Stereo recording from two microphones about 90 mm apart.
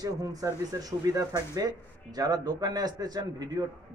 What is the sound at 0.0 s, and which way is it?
Speech, 45° right (ahead or behind).